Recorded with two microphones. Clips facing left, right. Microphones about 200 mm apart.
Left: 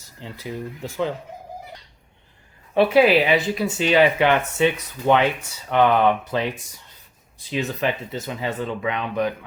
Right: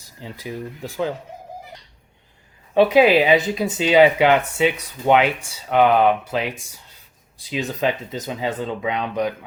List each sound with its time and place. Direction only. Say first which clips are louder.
0.2 s speech: right 1 dB; 15° right (ahead or behind)
2.9 s speech: right 1 dB; 20° right (ahead or behind)